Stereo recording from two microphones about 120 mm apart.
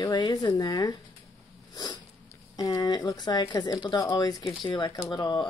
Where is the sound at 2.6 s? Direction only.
35° left (ahead or behind).